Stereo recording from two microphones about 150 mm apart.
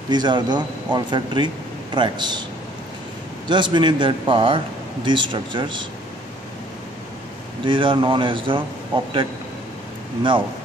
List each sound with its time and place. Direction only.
0.1 s a man's voice: 30° right (ahead or behind)
3.4 s a man's voice: 30° right (ahead or behind)
7.6 s a man's voice: 35° right (ahead or behind)